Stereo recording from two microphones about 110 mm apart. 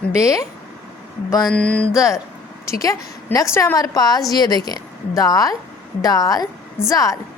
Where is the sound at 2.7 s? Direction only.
30° left (ahead or behind).